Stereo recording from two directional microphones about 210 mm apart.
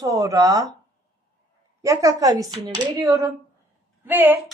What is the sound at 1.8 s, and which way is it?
A man's voice, 15° right (ahead or behind).